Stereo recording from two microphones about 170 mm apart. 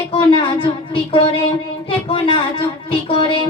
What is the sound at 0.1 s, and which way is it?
A woman's voice, 30° left (ahead or behind).